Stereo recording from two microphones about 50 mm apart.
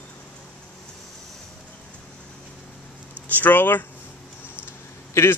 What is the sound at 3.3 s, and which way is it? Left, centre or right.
Speech, left.